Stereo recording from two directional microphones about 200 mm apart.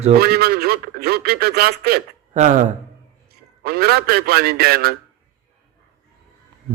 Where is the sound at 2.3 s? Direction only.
40° right (ahead or behind).